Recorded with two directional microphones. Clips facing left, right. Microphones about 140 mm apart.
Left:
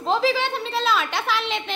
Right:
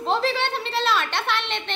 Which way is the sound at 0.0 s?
Centre (ahead or behind).